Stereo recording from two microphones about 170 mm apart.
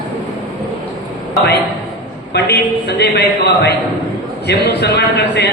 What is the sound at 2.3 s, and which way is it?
A man's voice, 75° left (ahead or behind).